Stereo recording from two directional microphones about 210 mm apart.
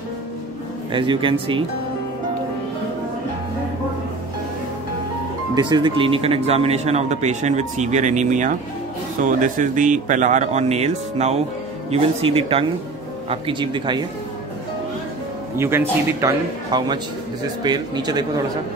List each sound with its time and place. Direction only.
0.9 s speech: 25° right (ahead or behind)
5.5 s speech: 20° right (ahead or behind)
15.5 s a man's voice: 10° right (ahead or behind)